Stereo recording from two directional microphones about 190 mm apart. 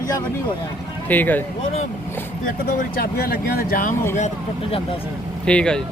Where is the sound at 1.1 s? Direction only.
10° left (ahead or behind).